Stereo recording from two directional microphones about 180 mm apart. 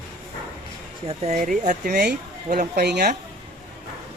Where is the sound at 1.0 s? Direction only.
40° right (ahead or behind); by 3.1 s 65° right (ahead or behind).